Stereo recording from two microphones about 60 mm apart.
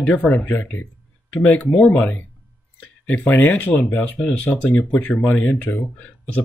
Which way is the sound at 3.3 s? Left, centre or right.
Left.